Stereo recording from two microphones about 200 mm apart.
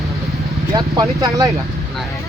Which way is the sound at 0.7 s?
20° right (ahead or behind).